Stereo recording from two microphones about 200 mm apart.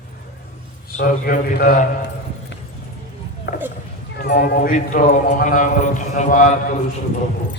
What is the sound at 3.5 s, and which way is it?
Clip-clop, 60° left (ahead or behind).